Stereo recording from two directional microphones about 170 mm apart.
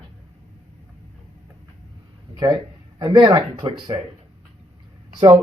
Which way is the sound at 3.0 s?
25° right (ahead or behind).